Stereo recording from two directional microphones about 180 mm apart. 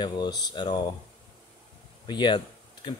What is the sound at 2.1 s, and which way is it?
Speech, 25° left (ahead or behind).